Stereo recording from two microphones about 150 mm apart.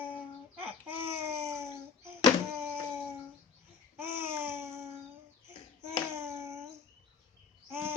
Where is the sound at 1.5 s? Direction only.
20° right (ahead or behind).